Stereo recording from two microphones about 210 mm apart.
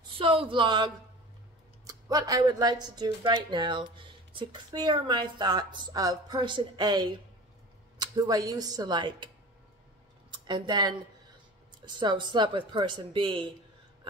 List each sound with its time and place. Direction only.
0.5 s speech: 25° right (ahead or behind)
10.3 s speech: 20° right (ahead or behind)